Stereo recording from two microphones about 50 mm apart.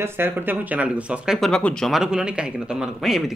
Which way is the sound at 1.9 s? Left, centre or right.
Centre.